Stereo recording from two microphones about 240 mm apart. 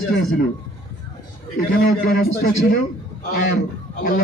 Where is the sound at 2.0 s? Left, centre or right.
Left.